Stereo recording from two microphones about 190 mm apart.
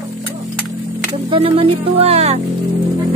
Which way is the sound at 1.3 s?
30° right (ahead or behind).